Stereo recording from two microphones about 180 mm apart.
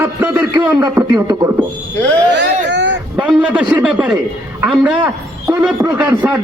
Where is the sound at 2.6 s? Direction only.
85° right.